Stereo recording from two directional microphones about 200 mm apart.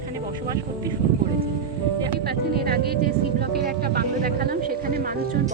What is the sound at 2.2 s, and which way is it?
Speech, 50° right (ahead or behind).